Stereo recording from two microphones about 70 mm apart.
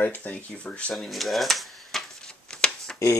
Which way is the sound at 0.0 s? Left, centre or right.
Left.